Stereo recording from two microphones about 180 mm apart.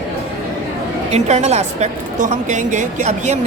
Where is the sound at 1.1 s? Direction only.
40° right (ahead or behind).